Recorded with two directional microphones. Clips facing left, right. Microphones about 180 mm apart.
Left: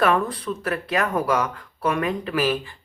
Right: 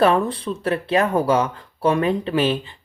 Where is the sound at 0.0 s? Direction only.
30° right (ahead or behind).